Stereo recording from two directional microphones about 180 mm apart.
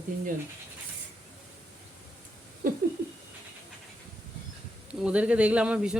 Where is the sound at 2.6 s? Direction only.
50° right (ahead or behind).